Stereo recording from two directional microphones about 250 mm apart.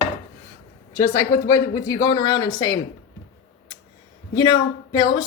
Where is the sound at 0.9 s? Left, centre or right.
Centre.